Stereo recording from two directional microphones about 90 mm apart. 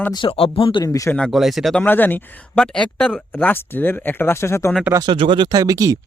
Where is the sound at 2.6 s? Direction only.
5° left (ahead or behind).